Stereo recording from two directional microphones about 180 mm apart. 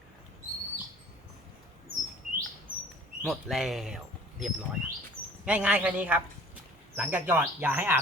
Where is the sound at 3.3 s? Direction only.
Centre (ahead or behind).